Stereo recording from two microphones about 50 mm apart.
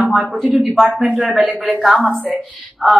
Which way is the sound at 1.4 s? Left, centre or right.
Right.